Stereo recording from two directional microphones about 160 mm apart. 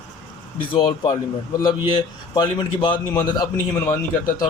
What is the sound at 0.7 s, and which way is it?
Speech, 30° left (ahead or behind).